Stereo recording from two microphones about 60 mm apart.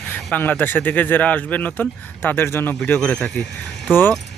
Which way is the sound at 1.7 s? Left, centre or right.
Left.